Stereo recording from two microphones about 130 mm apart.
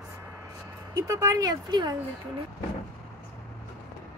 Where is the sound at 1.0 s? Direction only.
25° right (ahead or behind).